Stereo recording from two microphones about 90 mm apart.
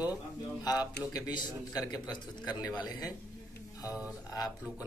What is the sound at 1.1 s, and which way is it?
Speech, 45° left (ahead or behind).